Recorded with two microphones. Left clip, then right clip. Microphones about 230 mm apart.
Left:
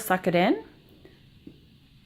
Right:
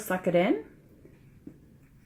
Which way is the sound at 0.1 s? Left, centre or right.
Left.